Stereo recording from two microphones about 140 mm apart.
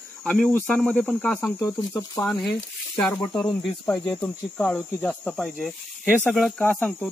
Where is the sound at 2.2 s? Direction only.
25° left (ahead or behind).